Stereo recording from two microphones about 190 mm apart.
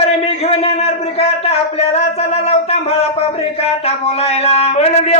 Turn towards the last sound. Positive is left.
turn(degrees=35)  # may be behind; listen again after turning